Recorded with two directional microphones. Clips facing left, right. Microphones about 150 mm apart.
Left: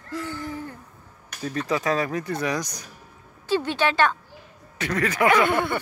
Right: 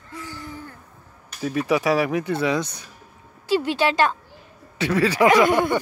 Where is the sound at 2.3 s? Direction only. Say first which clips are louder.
Right 4 dB; 25° right (ahead or behind).